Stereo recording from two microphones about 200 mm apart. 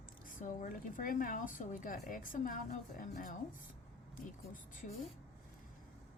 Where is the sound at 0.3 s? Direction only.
40° left (ahead or behind).